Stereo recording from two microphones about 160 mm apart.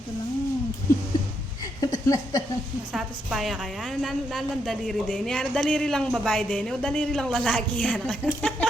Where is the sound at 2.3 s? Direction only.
25° left (ahead or behind).